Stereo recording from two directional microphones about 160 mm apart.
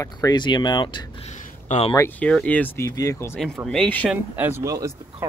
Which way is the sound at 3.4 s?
5° left (ahead or behind).